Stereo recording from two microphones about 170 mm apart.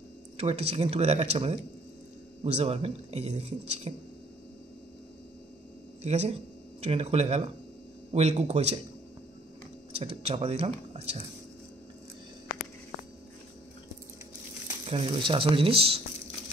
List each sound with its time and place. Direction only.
0.4 s speech: 35° right (ahead or behind)
6.0 s speech: 40° right (ahead or behind)
9.9 s speech: 35° right (ahead or behind)
14.9 s speech: 35° right (ahead or behind)